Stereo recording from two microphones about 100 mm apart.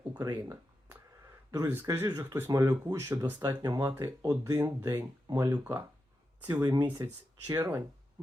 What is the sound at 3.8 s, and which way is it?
Speech, 25° right (ahead or behind).